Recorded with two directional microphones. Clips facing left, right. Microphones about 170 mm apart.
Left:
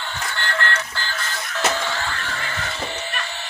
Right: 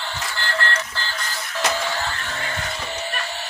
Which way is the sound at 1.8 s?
15° right (ahead or behind).